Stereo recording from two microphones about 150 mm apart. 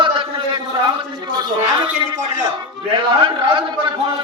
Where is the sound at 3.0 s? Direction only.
35° right (ahead or behind).